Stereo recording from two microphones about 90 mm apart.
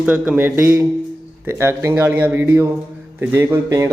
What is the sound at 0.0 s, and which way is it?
Speech, 15° right (ahead or behind).